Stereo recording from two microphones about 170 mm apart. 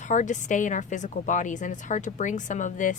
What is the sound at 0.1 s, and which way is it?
Speech, 45° left (ahead or behind).